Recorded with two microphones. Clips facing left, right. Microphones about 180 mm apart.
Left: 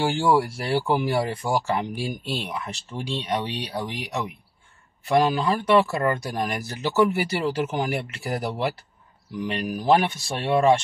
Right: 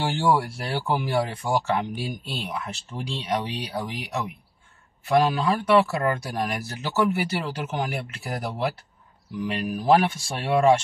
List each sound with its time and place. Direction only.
0.0 s speech: centre (ahead or behind)